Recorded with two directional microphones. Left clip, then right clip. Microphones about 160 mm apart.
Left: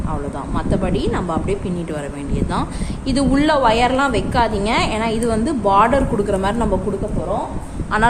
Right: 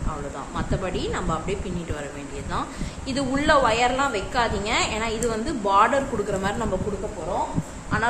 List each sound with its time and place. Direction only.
0.5 s a woman's voice: 45° left (ahead or behind)
3.1 s a woman's voice: 45° left (ahead or behind)